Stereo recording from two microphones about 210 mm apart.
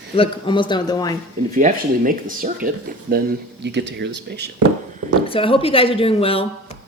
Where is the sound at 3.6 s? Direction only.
55° right (ahead or behind).